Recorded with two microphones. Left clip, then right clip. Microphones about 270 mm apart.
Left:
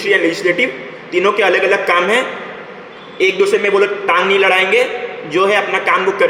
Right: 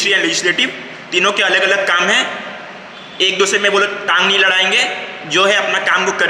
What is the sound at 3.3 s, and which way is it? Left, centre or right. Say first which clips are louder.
A man's voice: even; centre.